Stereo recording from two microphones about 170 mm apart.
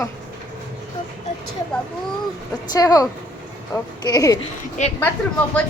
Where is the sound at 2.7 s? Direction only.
20° left (ahead or behind).